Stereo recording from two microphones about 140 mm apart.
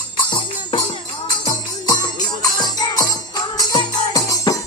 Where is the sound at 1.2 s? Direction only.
30° left (ahead or behind).